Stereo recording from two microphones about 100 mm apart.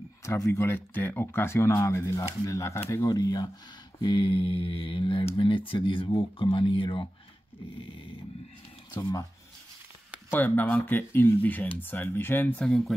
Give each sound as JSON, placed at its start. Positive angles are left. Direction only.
{"t": 0.2, "sound": "speech", "side_deg": 30}
{"t": 3.2, "sound": "speech", "side_deg": 45}
{"t": 4.0, "sound": "speech", "side_deg": 60}
{"t": 8.9, "sound": "speech", "side_deg": 40}
{"t": 10.3, "sound": "speech", "side_deg": 15}
{"t": 12.5, "sound": "speech", "side_deg": 5}